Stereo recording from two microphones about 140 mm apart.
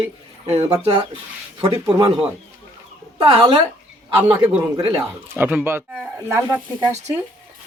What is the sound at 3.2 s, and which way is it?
Speech, 40° right (ahead or behind).